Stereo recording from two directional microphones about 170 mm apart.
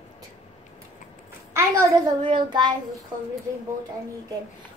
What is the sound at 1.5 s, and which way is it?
A child's voice, 25° right (ahead or behind).